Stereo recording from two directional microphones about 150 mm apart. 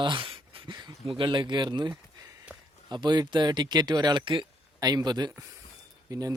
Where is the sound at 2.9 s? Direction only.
30° right (ahead or behind).